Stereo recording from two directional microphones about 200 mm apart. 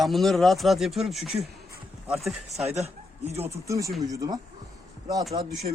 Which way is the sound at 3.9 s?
Centre (ahead or behind).